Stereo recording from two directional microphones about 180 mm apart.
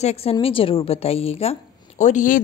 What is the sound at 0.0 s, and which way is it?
A woman's voice, 35° left (ahead or behind).